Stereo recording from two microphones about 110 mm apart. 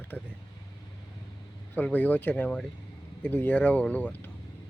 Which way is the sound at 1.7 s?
15° left (ahead or behind).